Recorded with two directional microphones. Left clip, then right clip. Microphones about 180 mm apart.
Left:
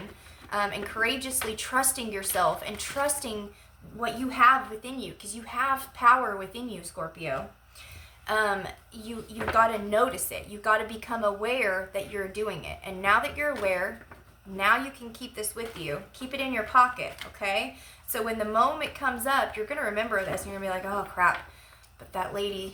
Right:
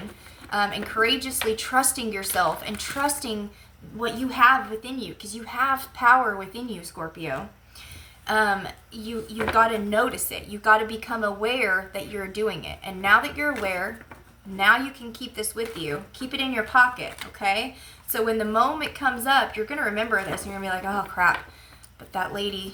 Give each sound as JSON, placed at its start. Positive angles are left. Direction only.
{"t": 0.5, "sound": "a woman's voice", "side_deg": 15}
{"t": 8.3, "sound": "a woman's voice", "side_deg": 15}
{"t": 18.1, "sound": "a woman's voice", "side_deg": 15}